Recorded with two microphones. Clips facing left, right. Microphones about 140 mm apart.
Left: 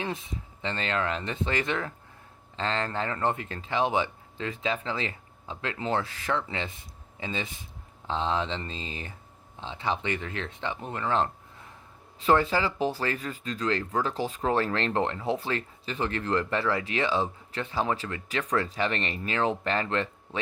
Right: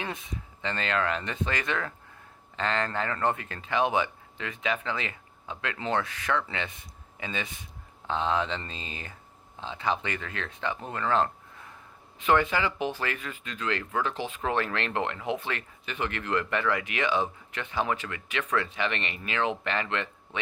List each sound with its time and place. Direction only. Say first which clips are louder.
0.0 s speech: left 2 dB; 25° left (ahead or behind)
10.9 s a sound: right 1 dB; 20° left (ahead or behind)
12.2 s speech: left 1 dB; 35° left (ahead or behind)